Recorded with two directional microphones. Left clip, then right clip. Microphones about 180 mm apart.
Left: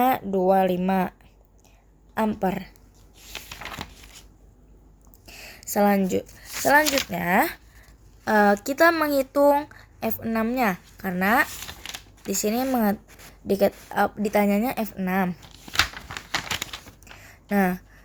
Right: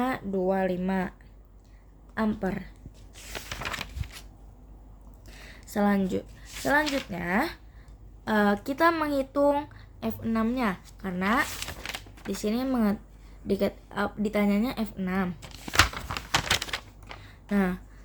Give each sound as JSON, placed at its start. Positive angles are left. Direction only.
{"t": 0.0, "sound": "speech", "side_deg": 40}
{"t": 2.1, "sound": "speech", "side_deg": 40}
{"t": 5.2, "sound": "a sound", "side_deg": 45}
{"t": 6.8, "sound": "speech", "side_deg": 70}
{"t": 7.1, "sound": "speech", "side_deg": 45}
{"t": 17.2, "sound": "a sound", "side_deg": 35}